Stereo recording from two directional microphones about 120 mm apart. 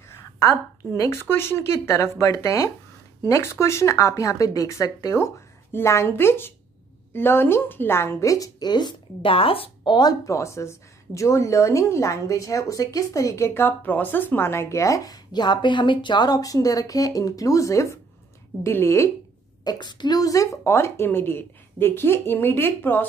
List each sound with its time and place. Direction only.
0.9 s speech: 30° left (ahead or behind); by 9.9 s 50° left (ahead or behind)
9.9 s speech: 30° left (ahead or behind)
19.6 s speech: 35° left (ahead or behind); by 23.0 s 15° left (ahead or behind)